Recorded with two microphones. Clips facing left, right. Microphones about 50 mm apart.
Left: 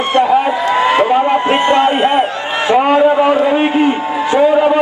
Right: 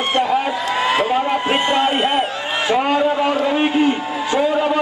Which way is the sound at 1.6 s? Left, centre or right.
Left.